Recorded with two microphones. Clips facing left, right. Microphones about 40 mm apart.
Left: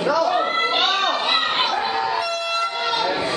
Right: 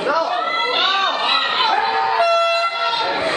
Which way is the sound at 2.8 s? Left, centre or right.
Centre.